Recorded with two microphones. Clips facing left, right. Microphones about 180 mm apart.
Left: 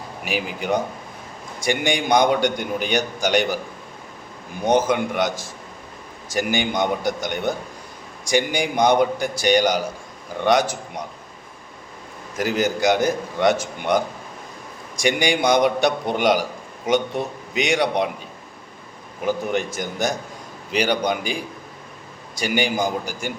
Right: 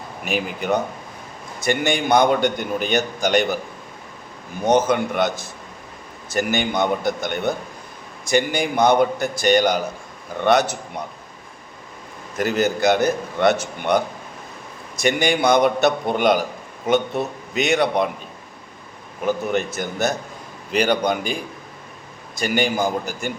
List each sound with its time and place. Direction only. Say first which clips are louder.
0.3 s a man's voice: right 1 dB; 10° left (ahead or behind)
4.6 s a man's voice: right 1 dB; 10° left (ahead or behind)
12.4 s a man's voice: right 1 dB; 10° left (ahead or behind)
19.5 s a man's voice: right 1 dB; 15° left (ahead or behind)